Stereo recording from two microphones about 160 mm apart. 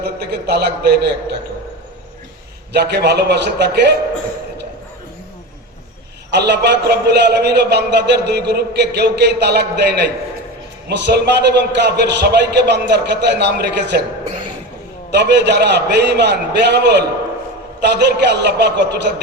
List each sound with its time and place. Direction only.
0.0 s a man's voice: 90° right
2.7 s a man's voice: 90° right
6.3 s a man's voice: 90° right
15.1 s a man's voice: 90° right